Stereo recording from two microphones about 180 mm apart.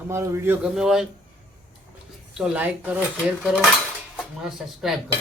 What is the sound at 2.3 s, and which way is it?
Speech, 5° right (ahead or behind).